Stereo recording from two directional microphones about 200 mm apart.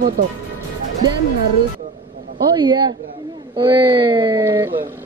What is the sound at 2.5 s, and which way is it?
A woman's voice, 20° right (ahead or behind).